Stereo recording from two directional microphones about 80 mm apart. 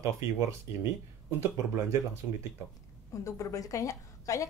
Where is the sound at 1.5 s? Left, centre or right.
Right.